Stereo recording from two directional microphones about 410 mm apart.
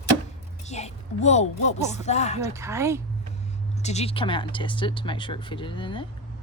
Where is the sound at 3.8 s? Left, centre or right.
Centre.